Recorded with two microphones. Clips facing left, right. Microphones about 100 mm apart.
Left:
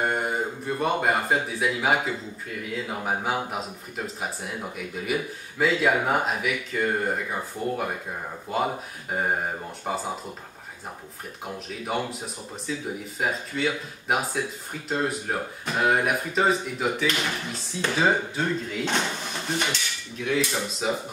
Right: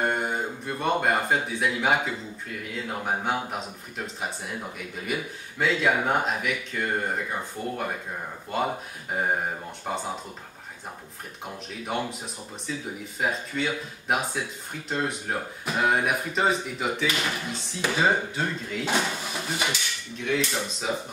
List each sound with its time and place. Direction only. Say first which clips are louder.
0.0 s a man's voice: left 1 dB; centre (ahead or behind)
9.8 s speech: left 1 dB; centre (ahead or behind)
11.4 s speech: left 2 dB; centre (ahead or behind)